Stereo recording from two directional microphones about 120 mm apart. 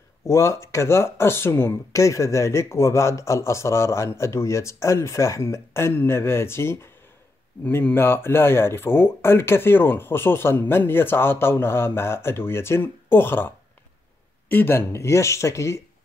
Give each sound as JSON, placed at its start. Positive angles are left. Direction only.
{"t": 0.2, "sound": "speech", "side_deg": 25}
{"t": 14.5, "sound": "speech", "side_deg": 20}